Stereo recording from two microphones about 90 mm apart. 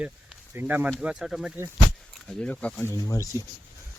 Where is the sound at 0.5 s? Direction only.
20° right (ahead or behind).